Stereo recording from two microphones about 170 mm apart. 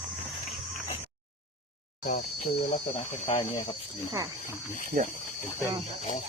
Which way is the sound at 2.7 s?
35° left (ahead or behind).